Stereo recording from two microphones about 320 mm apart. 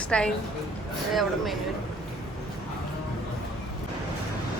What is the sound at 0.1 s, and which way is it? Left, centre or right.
Speech, centre.